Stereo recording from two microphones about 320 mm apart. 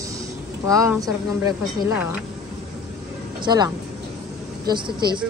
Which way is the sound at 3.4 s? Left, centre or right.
Centre.